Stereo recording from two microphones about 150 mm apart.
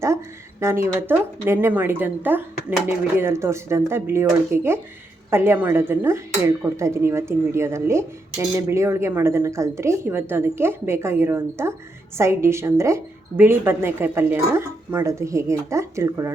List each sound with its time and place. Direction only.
0.6 s speech: 20° right (ahead or behind)